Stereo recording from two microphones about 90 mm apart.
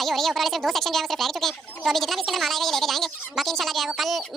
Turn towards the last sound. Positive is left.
turn(degrees=0)  # may be behind; listen again after turning